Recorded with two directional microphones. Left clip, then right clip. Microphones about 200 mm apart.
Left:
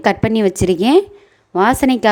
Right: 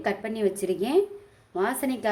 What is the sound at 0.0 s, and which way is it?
Speech, 50° left (ahead or behind).